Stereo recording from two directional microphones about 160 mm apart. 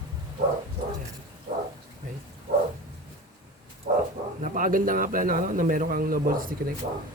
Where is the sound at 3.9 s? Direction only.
75° right (ahead or behind).